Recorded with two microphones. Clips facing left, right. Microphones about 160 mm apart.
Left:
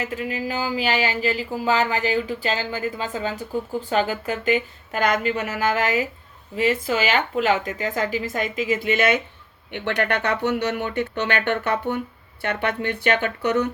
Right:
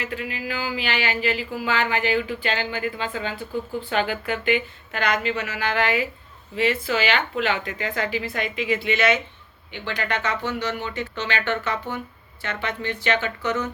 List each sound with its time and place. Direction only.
0.0 s speech: 40° left (ahead or behind)
9.7 s speech: 65° left (ahead or behind)